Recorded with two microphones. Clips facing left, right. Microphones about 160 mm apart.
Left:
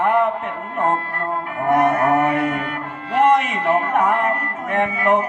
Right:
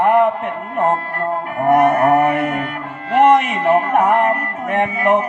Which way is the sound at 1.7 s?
20° right (ahead or behind).